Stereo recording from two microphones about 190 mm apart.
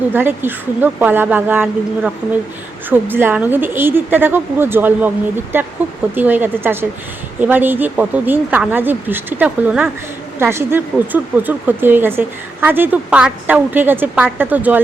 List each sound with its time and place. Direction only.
0.1 s speech: 10° right (ahead or behind)